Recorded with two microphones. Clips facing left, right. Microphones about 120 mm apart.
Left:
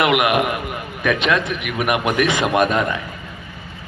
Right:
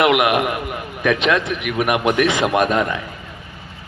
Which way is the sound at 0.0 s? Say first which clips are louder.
Right 1 dB; 20° right (ahead or behind).